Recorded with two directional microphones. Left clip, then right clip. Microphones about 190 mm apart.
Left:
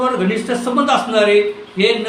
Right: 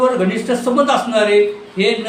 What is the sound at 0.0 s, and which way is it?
Speech, 20° right (ahead or behind).